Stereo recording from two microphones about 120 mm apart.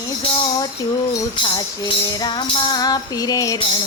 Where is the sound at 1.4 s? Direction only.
35° left (ahead or behind).